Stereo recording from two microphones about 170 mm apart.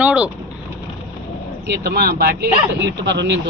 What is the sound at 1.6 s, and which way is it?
Speech, 65° right (ahead or behind).